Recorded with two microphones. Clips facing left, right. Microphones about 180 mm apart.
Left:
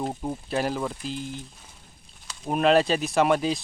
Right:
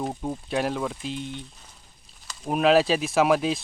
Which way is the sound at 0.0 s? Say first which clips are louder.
Even; 5° left (ahead or behind).